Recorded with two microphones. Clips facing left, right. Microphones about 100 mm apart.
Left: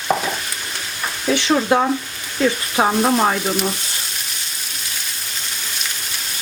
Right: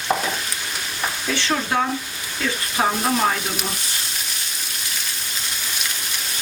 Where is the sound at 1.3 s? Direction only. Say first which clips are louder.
Left 7 dB; 20° left (ahead or behind).